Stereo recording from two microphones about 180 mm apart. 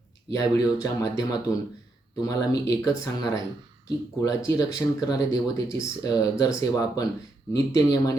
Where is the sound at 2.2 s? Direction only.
20° left (ahead or behind).